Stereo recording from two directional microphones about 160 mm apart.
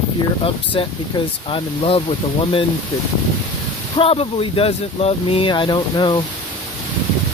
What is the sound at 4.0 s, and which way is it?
Speech, 35° left (ahead or behind).